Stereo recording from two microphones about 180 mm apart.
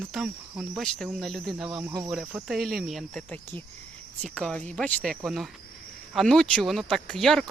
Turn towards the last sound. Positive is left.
turn(degrees=5)  # may be behind; listen again after turning